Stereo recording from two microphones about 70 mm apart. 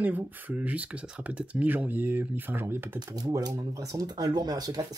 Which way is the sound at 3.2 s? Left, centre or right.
Right.